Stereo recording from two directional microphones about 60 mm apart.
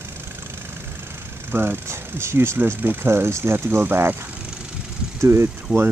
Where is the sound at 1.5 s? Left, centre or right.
Right.